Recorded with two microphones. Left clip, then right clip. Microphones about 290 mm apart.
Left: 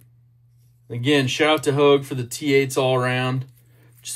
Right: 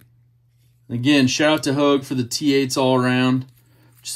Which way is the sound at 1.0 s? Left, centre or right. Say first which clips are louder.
Right 2 dB; centre.